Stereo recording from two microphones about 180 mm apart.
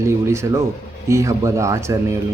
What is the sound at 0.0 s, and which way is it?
Speech, 15° right (ahead or behind).